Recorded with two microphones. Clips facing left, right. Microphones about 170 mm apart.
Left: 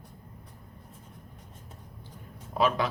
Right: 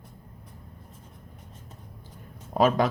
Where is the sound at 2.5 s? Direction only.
45° right (ahead or behind).